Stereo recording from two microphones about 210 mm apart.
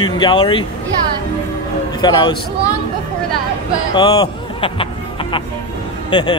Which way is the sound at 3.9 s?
20° left (ahead or behind).